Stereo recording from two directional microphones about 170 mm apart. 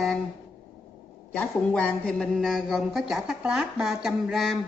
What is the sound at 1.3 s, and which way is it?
A man's voice, 5° left (ahead or behind).